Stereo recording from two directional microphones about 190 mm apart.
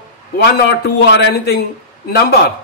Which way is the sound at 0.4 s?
65° left (ahead or behind).